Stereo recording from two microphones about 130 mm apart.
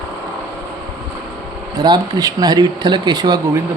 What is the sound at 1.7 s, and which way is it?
Speech, 30° right (ahead or behind).